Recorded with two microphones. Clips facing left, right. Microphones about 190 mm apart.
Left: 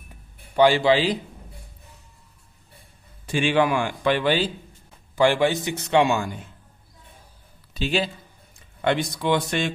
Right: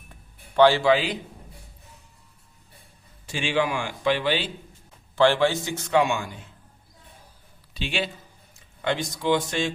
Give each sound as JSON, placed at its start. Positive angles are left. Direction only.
{"t": 0.5, "sound": "a man's voice", "side_deg": 15}
{"t": 3.2, "sound": "a man's voice", "side_deg": 55}
{"t": 5.1, "sound": "speech", "side_deg": 15}
{"t": 6.1, "sound": "a man's voice", "side_deg": 40}
{"t": 7.7, "sound": "speech", "side_deg": 40}
{"t": 8.8, "sound": "a man's voice", "side_deg": 60}